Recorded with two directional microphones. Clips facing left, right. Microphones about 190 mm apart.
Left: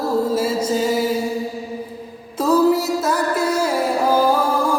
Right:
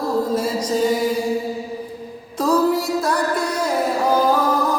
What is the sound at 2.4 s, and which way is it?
Music, 5° left (ahead or behind).